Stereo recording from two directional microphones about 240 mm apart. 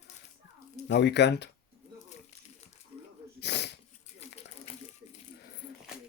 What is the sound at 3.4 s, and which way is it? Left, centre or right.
Sneeze, left.